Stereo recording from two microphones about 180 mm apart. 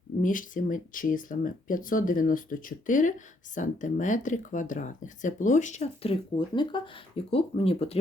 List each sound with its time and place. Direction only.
0.2 s speech: 45° left (ahead or behind)
6.6 s speech: 25° left (ahead or behind)